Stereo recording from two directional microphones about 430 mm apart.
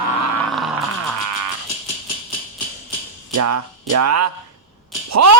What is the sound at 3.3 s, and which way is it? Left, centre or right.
Speech, right.